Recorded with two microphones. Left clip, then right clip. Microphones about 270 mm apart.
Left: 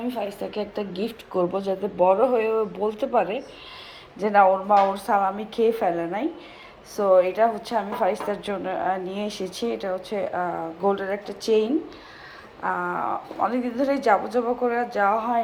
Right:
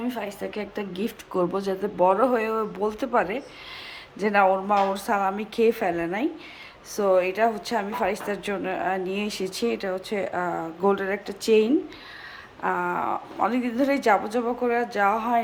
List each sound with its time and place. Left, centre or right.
0.1 s a woman's voice: centre
2.0 s speech: right
2.2 s a woman's voice: centre
2.5 s speech: right
4.2 s a woman's voice: centre